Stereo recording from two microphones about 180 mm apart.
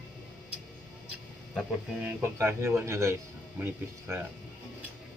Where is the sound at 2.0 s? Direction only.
10° right (ahead or behind).